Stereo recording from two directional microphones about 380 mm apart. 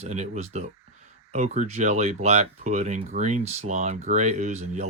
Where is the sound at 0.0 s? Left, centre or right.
Centre.